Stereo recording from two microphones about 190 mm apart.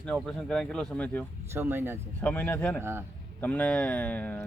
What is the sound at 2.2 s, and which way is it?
Speech, 10° left (ahead or behind).